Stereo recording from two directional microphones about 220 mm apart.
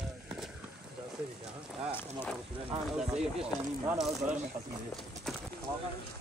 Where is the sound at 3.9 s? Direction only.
Centre (ahead or behind).